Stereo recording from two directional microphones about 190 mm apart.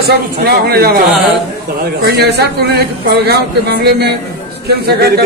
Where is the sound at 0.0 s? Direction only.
55° right (ahead or behind).